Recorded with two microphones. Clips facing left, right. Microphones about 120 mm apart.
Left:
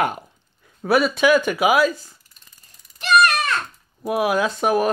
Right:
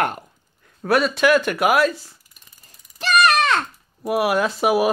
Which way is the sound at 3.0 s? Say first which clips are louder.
Even; 90° right.